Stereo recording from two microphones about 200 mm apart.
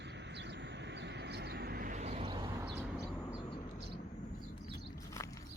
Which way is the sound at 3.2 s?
20° left (ahead or behind).